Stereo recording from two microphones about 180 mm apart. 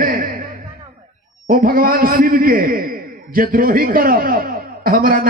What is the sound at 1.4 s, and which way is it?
A man's voice, 55° right (ahead or behind).